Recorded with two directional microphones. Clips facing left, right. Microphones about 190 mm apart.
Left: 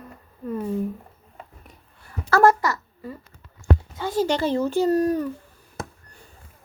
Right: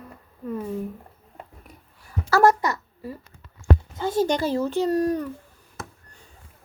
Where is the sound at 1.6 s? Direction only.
Centre (ahead or behind).